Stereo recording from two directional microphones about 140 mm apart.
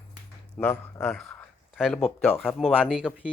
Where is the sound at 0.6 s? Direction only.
10° left (ahead or behind).